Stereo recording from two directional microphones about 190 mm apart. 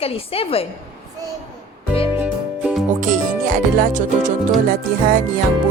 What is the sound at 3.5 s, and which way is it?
Music, 45° right (ahead or behind).